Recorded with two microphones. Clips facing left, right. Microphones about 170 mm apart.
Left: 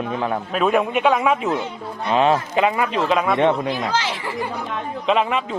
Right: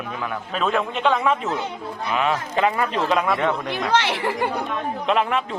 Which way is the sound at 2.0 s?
30° left (ahead or behind).